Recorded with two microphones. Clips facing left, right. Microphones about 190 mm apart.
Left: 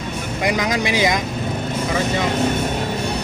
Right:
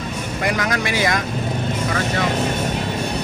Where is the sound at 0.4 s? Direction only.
15° left (ahead or behind).